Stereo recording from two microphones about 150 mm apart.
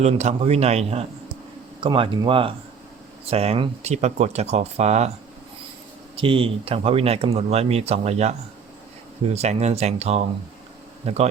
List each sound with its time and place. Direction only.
0.0 s speech: 50° right (ahead or behind)
1.8 s speech: 35° right (ahead or behind)
6.1 s speech: 35° right (ahead or behind)